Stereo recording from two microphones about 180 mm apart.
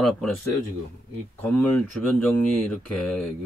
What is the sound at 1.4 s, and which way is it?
Speech, 10° left (ahead or behind).